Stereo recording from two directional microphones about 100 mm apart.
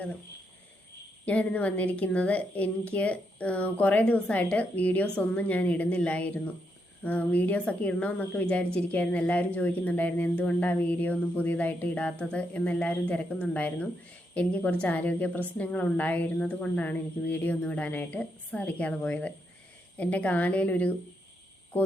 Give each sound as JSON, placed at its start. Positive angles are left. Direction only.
{"t": 1.2, "sound": "a woman's voice", "side_deg": 15}